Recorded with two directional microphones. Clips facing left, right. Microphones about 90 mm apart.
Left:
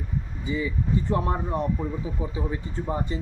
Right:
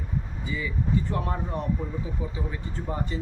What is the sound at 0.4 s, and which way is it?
Speech, 25° left (ahead or behind).